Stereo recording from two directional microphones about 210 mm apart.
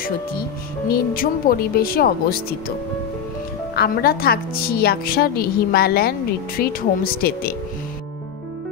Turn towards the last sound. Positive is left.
turn(degrees=45)  # may be behind; listen again after turning